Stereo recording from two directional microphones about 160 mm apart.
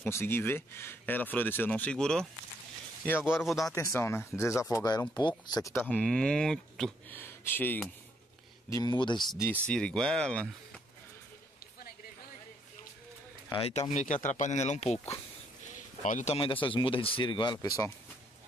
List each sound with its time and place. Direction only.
0.0 s speech: 15° left (ahead or behind)
3.3 s speech: centre (ahead or behind)
3.7 s speech: 15° left (ahead or behind)
7.2 s speech: 15° left (ahead or behind)
8.6 s speech: 20° left (ahead or behind)
9.4 s speech: 10° left (ahead or behind)
13.5 s speech: 35° left (ahead or behind)
16.0 s speech: 50° left (ahead or behind)
16.3 s speech: 30° left (ahead or behind)